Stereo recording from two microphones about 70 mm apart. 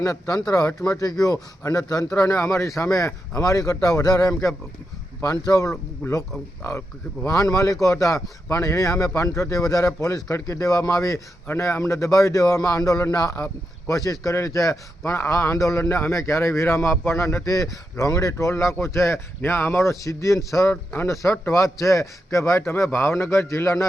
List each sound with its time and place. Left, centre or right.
0.0 s speech: left
2.1 s speech: left
3.7 s a man's voice: left
5.2 s speech: left
6.0 s speech: left
6.6 s a man's voice: left
7.3 s a man's voice: left